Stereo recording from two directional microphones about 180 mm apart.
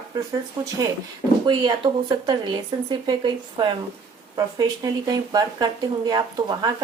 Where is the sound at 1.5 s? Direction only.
25° right (ahead or behind).